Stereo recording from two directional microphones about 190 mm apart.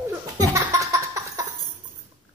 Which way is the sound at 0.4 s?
20° right (ahead or behind).